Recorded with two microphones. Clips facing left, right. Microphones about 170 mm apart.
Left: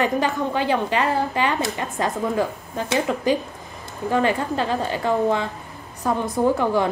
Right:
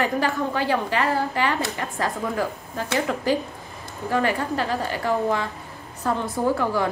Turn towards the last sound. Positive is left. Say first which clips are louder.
# left 3 dB
turn(degrees=20)  # may be behind; listen again after turning